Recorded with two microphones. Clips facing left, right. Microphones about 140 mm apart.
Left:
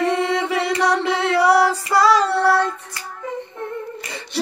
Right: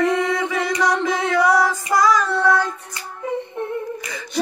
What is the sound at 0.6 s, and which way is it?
Chant, 30° left (ahead or behind).